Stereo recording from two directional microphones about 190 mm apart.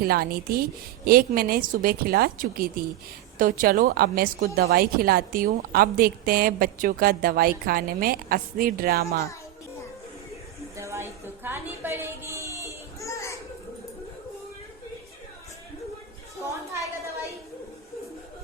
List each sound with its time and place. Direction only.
0.0 s speech: 50° right (ahead or behind)
10.8 s a sound: 15° right (ahead or behind)
13.0 s children playing: 15° left (ahead or behind)